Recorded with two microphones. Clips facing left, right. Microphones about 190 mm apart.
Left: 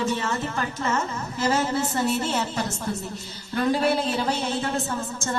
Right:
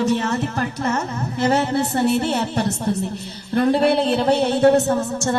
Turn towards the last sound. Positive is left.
turn(degrees=-65)  # may be behind; listen again after turning